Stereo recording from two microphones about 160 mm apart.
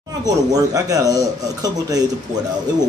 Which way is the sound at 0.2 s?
25° right (ahead or behind).